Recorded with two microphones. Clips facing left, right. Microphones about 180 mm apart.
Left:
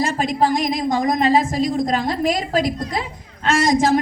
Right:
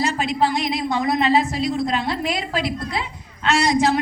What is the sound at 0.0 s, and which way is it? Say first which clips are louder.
A woman's voice: left 2 dB; 45° left (ahead or behind).